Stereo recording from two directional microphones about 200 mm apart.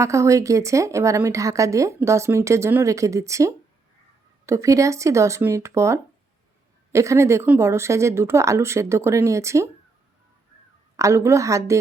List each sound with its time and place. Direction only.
0.0 s a woman's voice: 15° right (ahead or behind)
10.9 s a woman's voice: 15° right (ahead or behind)